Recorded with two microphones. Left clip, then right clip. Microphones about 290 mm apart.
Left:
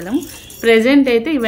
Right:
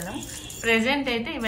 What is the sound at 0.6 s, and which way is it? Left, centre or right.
Speech, centre.